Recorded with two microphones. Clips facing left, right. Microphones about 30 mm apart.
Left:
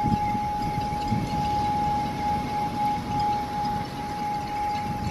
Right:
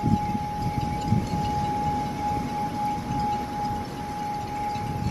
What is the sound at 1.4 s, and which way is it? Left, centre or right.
Vehicle, left.